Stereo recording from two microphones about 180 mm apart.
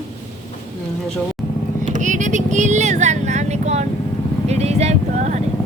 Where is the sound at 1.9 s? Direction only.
45° right (ahead or behind).